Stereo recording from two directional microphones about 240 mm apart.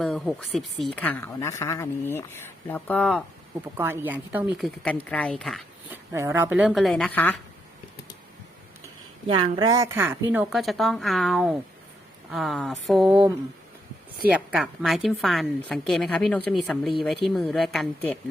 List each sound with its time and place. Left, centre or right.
0.0 s a woman's voice: centre
3.8 s a woman's voice: centre
6.1 s a woman's voice: centre
9.2 s a woman's voice: right; by 18.2 s centre